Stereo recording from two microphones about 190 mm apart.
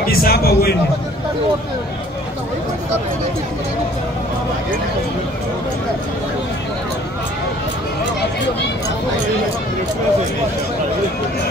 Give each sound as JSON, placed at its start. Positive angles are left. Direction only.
{"t": 0.0, "sound": "a man's voice", "side_deg": 50}